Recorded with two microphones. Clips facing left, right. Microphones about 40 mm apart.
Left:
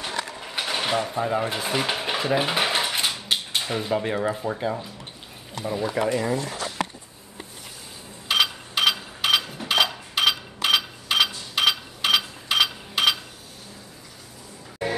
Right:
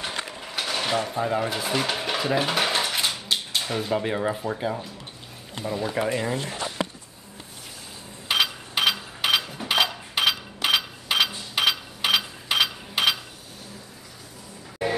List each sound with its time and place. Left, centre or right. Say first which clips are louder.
0.1 s mechanisms: left 2 dB; right
0.4 s mechanisms: right 1 dB; centre
1.5 s dishes: even; centre
3.6 s speech: left 1 dB; centre
6.3 s speech: left 2 dB; right
8.3 s a sound: left 1 dB; centre